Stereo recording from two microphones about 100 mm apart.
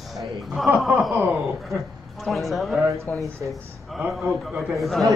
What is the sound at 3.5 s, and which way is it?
Speech, 5° right (ahead or behind).